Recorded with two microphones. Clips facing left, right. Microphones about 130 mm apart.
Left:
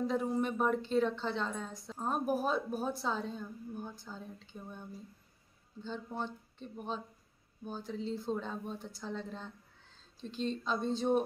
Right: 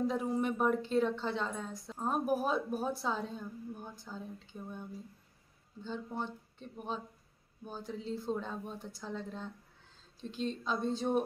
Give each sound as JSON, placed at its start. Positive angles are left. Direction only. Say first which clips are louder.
{"t": 0.0, "sound": "a woman's voice", "louder": "even", "side_deg": -5}
{"t": 5.9, "sound": "a woman's voice", "louder": "even", "side_deg": -10}
{"t": 7.6, "sound": "a woman's voice", "louder": "left 2 dB", "side_deg": -10}